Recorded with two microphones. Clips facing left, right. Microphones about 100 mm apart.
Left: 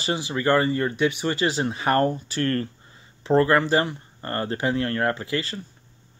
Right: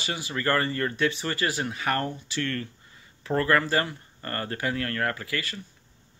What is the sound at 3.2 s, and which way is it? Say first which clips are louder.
Speech: left 5 dB; 25° left (ahead or behind).